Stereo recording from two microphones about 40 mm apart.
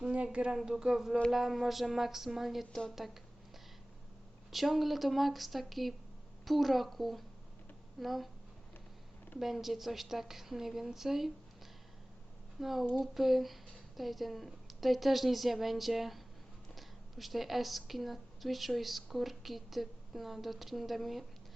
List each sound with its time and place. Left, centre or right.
0.0 s a woman's voice: right
1.3 s a woman's voice: centre
4.5 s speech: centre
9.4 s a woman's voice: centre
12.5 s a woman's voice: centre